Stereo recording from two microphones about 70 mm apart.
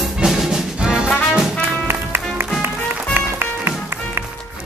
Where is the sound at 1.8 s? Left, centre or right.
Right.